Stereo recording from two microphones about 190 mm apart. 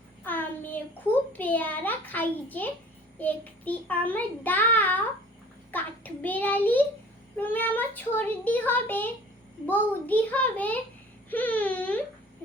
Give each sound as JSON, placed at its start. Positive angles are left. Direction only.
{"t": 0.3, "sound": "child singing", "side_deg": 10}